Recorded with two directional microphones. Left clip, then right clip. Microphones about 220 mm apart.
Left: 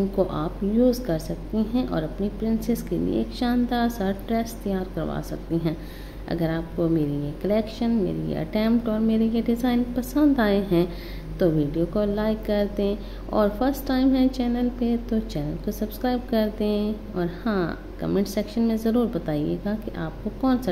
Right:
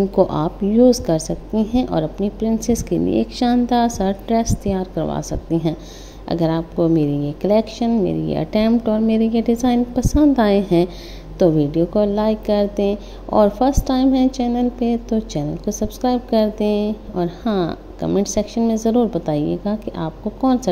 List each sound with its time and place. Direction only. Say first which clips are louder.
0.1 s a woman's voice: right 8 dB; 25° right (ahead or behind)